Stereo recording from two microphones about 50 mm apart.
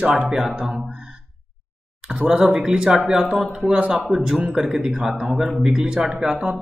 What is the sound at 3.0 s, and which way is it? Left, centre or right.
Speech, right.